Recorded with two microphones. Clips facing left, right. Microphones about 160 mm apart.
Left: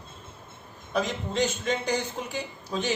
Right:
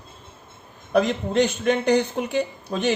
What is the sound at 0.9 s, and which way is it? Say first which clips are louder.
A man's voice: right 8 dB; 65° right (ahead or behind).